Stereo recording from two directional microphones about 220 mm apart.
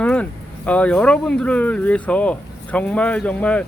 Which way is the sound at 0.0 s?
5° left (ahead or behind).